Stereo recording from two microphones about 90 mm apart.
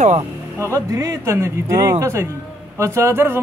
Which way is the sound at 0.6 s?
35° right (ahead or behind).